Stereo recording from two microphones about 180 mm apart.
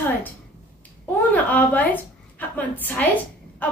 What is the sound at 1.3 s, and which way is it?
A woman's voice, 10° left (ahead or behind).